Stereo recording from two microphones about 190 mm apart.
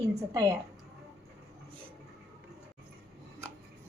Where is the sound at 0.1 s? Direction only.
15° right (ahead or behind).